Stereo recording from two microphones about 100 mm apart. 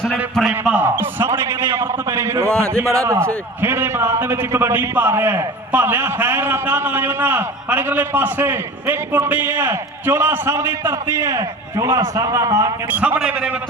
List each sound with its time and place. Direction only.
0.7 s a man's voice: 20° right (ahead or behind)
2.5 s speech: 10° left (ahead or behind)
2.8 s a man's voice: 30° right (ahead or behind)
12.9 s a man's voice: 15° right (ahead or behind)